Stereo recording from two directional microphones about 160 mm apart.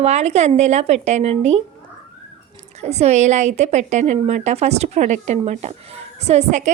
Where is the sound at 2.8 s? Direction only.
45° right (ahead or behind).